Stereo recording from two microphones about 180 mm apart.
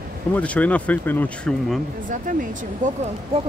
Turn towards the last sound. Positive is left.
turn(degrees=-40)  # may be behind; listen again after turning